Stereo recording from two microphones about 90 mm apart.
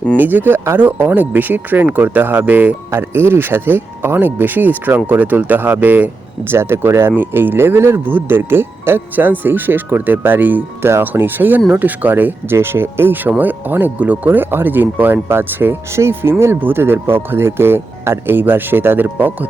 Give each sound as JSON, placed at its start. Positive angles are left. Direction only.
{"t": 0.2, "sound": "speech", "side_deg": -20}